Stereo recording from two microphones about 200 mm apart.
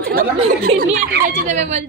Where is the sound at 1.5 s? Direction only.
35° right (ahead or behind).